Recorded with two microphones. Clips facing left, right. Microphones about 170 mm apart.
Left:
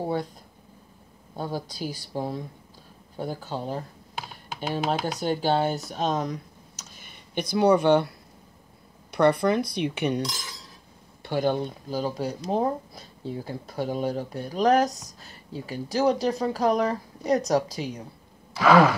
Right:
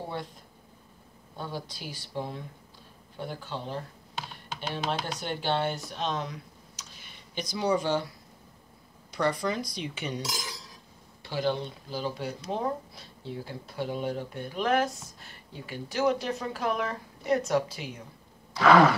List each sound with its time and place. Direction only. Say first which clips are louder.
0.0 s speech: left 8 dB; 40° left (ahead or behind)
1.3 s speech: left 6 dB; 40° left (ahead or behind); by 8.1 s 60° left (ahead or behind)
9.1 s speech: left 8 dB; 60° left (ahead or behind)
11.2 s speech: left 5 dB; 50° left (ahead or behind)
18.6 s a sound: left 1 dB; 5° left (ahead or behind)